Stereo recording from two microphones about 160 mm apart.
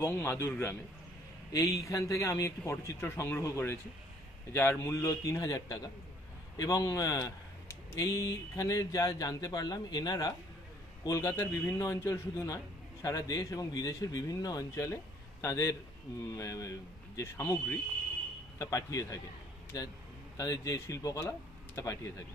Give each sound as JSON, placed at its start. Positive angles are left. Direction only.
{"t": 0.0, "sound": "a man's voice", "side_deg": 15}
{"t": 1.5, "sound": "a man's voice", "side_deg": 20}